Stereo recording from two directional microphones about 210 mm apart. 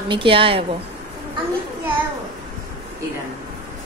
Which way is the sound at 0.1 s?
25° right (ahead or behind).